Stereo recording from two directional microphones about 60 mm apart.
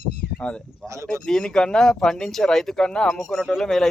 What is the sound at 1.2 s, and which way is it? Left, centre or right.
Speech, centre.